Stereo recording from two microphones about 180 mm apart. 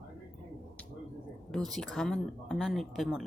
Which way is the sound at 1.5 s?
Centre (ahead or behind).